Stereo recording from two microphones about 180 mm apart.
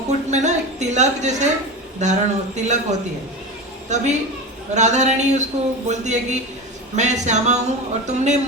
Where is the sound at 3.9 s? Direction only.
40° right (ahead or behind).